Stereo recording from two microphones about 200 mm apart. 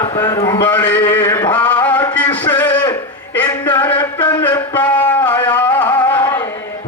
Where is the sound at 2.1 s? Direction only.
10° left (ahead or behind).